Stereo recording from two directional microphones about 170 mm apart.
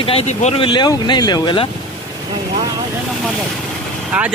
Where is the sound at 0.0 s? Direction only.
35° left (ahead or behind).